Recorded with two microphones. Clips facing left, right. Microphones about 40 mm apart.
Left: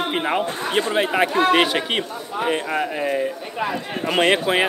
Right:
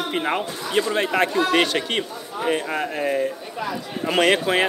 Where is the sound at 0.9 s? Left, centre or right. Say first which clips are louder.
Left 3 dB; centre.